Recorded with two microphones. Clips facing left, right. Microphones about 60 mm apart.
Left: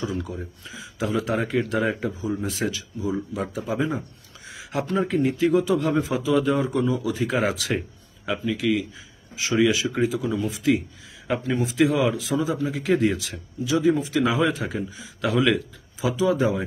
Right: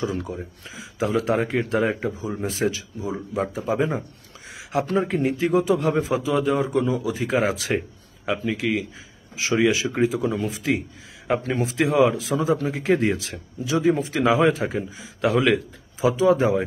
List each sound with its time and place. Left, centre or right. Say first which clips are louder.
0.0 s a man's voice: right 2 dB; right
6.4 s a man's voice: right 1 dB; centre; by 11.6 s right
11.6 s a man's voice: right 2 dB; right